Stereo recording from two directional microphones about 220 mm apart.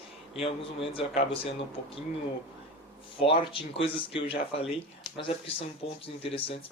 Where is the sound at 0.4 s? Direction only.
25° left (ahead or behind).